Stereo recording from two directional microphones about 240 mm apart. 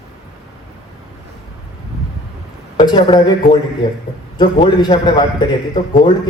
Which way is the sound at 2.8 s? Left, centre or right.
Centre.